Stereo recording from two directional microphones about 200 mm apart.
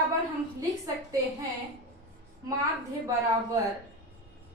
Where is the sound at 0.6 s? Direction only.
15° right (ahead or behind).